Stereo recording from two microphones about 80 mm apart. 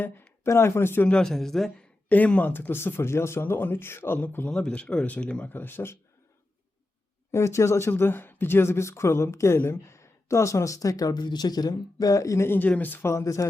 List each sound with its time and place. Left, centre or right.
0.4 s speech: left
1.0 s speech: centre
2.0 s speech: centre
4.4 s speech: centre; by 6.0 s left
7.3 s speech: left
12.6 s speech: centre
13.1 s speech: left